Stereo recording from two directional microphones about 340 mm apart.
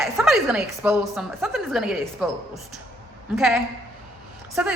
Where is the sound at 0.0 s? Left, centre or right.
Centre.